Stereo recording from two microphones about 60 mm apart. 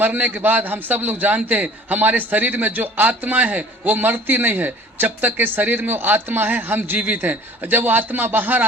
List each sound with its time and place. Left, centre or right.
0.0 s a man's voice: right